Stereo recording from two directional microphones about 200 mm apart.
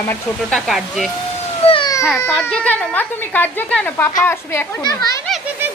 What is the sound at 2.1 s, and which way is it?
Speech, 10° left (ahead or behind).